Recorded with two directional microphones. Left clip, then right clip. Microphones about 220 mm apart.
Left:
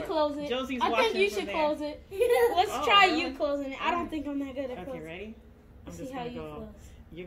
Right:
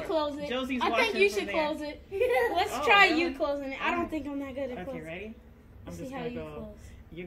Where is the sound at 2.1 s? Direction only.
50° left (ahead or behind).